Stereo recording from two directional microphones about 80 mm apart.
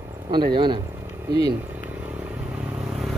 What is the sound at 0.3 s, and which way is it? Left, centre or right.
Speech, right.